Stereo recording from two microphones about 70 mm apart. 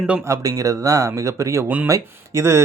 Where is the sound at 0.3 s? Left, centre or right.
Right.